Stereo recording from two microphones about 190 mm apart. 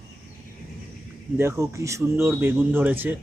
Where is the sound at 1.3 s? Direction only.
15° right (ahead or behind).